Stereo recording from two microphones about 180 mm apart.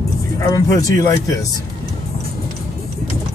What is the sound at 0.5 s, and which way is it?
Speech, 20° left (ahead or behind).